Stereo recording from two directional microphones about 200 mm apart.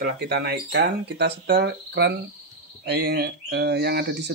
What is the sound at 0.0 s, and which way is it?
Speech, 55° right (ahead or behind).